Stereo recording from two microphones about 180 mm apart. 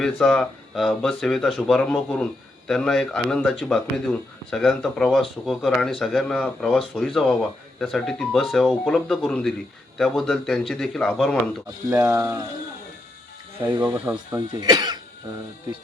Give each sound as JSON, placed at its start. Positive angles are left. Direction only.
{"t": 0.0, "sound": "speech", "side_deg": 5}
{"t": 11.9, "sound": "speech", "side_deg": -15}
{"t": 13.7, "sound": "speech", "side_deg": -25}
{"t": 13.9, "sound": "speech", "side_deg": -5}
{"t": 14.3, "sound": "speech", "side_deg": -20}